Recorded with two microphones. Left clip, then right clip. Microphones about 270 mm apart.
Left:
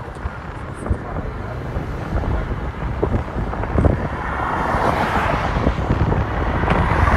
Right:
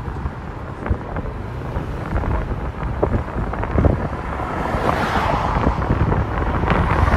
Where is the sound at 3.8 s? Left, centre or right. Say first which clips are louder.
Left 1 dB; centre.